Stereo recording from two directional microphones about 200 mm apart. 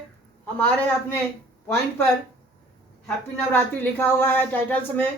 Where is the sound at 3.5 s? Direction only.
10° left (ahead or behind).